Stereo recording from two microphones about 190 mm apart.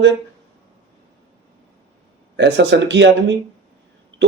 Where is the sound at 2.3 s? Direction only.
65° right (ahead or behind).